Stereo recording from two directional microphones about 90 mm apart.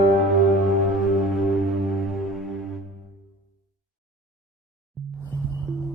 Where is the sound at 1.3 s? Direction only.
Centre (ahead or behind).